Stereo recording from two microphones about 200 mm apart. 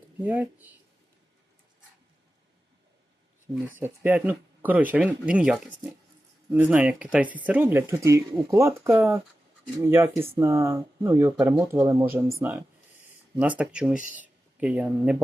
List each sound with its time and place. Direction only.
0.2 s speech: 10° right (ahead or behind)
3.8 s speech: 10° right (ahead or behind)